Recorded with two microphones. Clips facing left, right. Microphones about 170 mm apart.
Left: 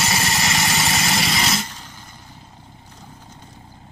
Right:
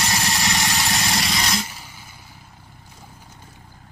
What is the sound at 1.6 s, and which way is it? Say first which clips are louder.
Vehicle: left 1 dB; 10° right (ahead or behind).